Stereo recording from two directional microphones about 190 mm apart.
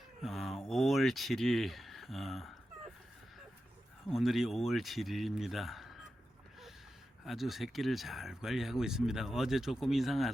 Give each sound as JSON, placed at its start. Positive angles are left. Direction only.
{"t": 0.2, "sound": "speech", "side_deg": 0}
{"t": 4.1, "sound": "speech", "side_deg": 0}
{"t": 7.3, "sound": "speech", "side_deg": 0}